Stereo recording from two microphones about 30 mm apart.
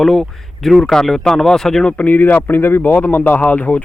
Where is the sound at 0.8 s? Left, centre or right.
Left.